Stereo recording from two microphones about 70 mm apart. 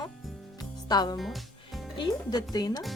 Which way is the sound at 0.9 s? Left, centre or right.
Left.